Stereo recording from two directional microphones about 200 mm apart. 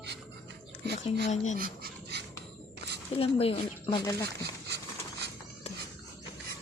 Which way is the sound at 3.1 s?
30° left (ahead or behind).